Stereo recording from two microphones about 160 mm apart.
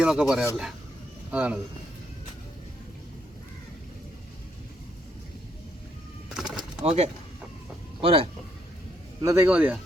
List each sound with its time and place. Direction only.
0.0 s speech: 5° right (ahead or behind)
6.2 s bird: 5° right (ahead or behind)
6.8 s speech: 40° right (ahead or behind)
9.2 s speech: 20° right (ahead or behind)